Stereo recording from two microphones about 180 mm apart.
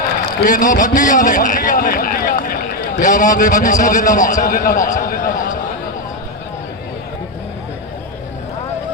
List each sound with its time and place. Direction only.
0.3 s a man's voice: 45° left (ahead or behind)